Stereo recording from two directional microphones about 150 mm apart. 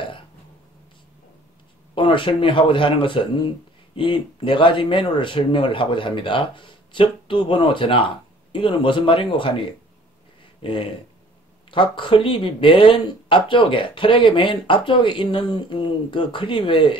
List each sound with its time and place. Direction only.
2.0 s speech: 35° left (ahead or behind)
10.6 s speech: 35° left (ahead or behind)